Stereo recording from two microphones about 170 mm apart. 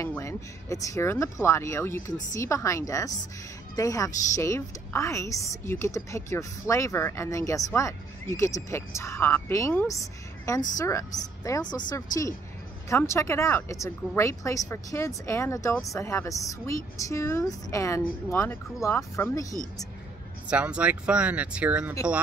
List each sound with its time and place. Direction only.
0.0 s a woman's voice: 15° left (ahead or behind)
20.4 s speech: 5° right (ahead or behind)